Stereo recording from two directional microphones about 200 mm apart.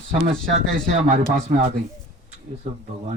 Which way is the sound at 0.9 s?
35° right (ahead or behind).